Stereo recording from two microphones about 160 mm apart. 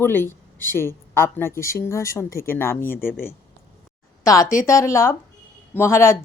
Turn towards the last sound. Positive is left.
turn(degrees=15)  # may be behind; listen again after turning